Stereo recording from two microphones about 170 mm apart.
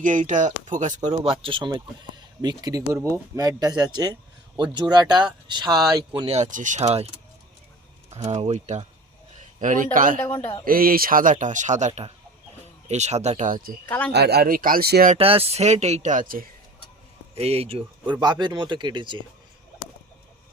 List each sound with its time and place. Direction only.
0.0 s speech: 50° right (ahead or behind)
8.1 s speech: 40° right (ahead or behind)
10.2 s a man's voice: 10° left (ahead or behind)
10.7 s speech: 60° right (ahead or behind)
13.8 s a man's voice: 10° left (ahead or behind)
14.1 s speech: 75° right (ahead or behind)
15.1 s speech: 35° right (ahead or behind); by 16.5 s 55° right (ahead or behind)
17.3 s speech: 35° right (ahead or behind)